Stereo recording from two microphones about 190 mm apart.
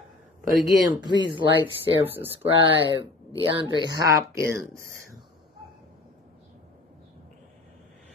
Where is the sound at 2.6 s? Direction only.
25° right (ahead or behind).